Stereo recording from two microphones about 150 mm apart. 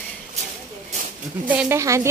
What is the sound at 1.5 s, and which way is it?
Speech, 15° right (ahead or behind).